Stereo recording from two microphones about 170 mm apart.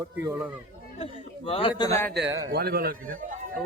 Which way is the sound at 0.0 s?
15° right (ahead or behind).